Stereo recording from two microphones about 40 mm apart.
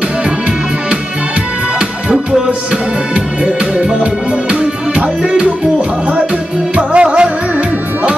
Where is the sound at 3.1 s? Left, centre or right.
Right.